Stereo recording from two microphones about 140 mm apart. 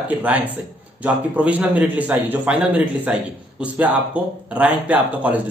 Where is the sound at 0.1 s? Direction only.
10° right (ahead or behind).